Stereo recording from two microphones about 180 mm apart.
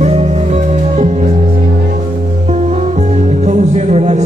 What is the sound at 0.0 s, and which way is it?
Music, 40° right (ahead or behind).